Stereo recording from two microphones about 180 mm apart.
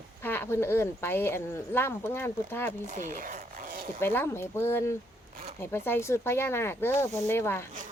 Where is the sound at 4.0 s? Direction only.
10° left (ahead or behind).